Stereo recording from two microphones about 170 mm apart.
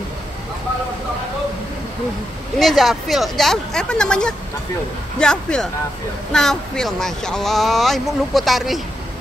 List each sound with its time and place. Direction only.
2.6 s speech: centre (ahead or behind)